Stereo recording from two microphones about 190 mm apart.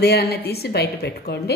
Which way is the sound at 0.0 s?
55° left (ahead or behind).